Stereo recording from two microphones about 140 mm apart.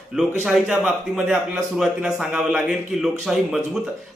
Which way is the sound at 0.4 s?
5° right (ahead or behind).